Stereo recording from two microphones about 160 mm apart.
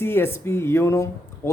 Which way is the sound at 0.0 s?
15° left (ahead or behind).